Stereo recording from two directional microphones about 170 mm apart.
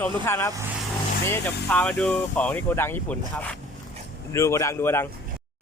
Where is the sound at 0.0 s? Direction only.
15° left (ahead or behind).